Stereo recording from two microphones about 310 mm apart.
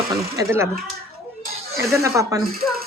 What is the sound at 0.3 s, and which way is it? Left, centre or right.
A woman's voice, centre.